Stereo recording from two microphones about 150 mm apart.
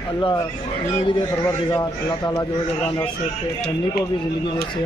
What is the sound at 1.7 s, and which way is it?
Speech, 20° left (ahead or behind).